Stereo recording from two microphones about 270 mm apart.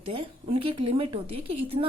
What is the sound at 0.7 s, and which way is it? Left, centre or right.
Speech, right.